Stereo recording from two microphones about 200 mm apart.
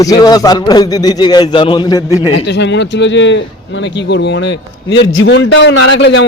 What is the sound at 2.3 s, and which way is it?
A man's voice, 60° left (ahead or behind).